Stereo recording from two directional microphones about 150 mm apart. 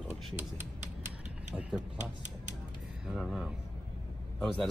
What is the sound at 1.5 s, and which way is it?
Speech, 5° right (ahead or behind).